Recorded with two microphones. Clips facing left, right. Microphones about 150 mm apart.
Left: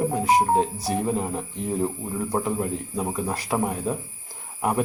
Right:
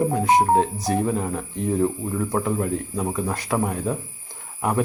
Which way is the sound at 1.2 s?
20° left (ahead or behind).